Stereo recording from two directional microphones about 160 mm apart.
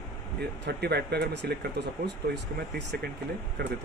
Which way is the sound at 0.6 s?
90° right.